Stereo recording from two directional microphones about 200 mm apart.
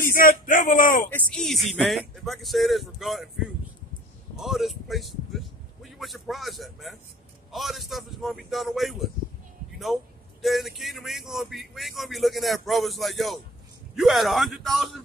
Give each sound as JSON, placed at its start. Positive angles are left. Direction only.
{"t": 0.1, "sound": "speech", "side_deg": 45}
{"t": 1.1, "sound": "speech", "side_deg": 5}
{"t": 4.4, "sound": "speech", "side_deg": 0}
{"t": 10.4, "sound": "speech", "side_deg": 0}